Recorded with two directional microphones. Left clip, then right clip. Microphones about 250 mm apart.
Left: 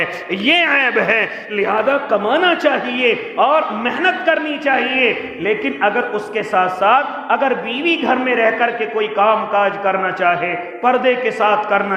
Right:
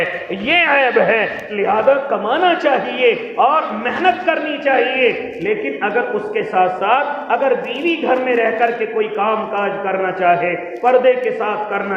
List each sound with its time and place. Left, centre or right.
0.4 s a man's voice: left